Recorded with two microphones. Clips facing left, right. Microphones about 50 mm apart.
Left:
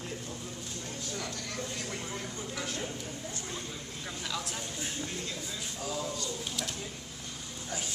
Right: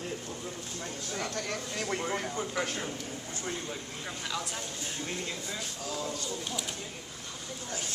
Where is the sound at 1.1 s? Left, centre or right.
Right.